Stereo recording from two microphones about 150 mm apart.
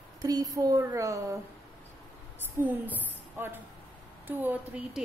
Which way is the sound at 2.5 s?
10° right (ahead or behind).